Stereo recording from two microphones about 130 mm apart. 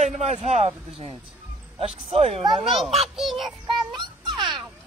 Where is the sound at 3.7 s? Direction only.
35° right (ahead or behind).